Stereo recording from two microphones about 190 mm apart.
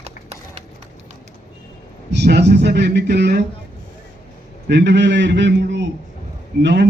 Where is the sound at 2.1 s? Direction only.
60° right (ahead or behind).